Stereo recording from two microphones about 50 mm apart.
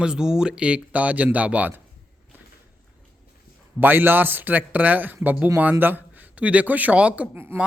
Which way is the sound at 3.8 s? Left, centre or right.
Right.